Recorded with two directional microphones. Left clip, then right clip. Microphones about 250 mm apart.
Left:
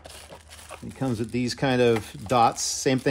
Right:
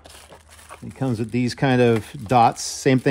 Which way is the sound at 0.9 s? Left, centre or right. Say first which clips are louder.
Right 3 dB; right.